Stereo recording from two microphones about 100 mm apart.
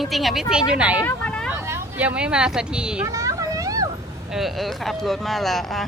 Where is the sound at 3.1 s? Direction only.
35° right (ahead or behind).